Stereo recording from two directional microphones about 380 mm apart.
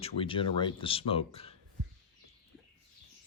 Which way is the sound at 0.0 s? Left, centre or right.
Centre.